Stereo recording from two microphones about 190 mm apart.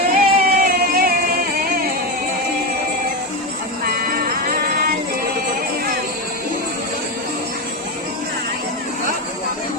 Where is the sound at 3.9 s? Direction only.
50° right (ahead or behind).